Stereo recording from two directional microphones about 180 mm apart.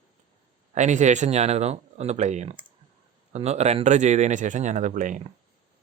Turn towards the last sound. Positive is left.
turn(degrees=-45)  # may be behind; listen again after turning